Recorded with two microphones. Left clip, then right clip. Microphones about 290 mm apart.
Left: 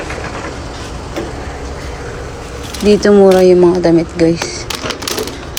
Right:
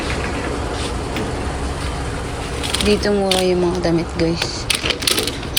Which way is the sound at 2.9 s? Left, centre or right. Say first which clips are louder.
Left 11 dB; left.